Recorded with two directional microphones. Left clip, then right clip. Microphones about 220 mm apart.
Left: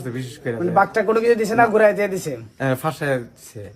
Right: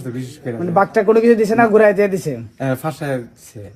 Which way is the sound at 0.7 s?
35° right (ahead or behind).